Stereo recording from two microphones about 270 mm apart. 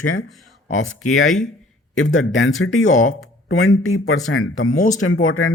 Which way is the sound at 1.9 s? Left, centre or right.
Left.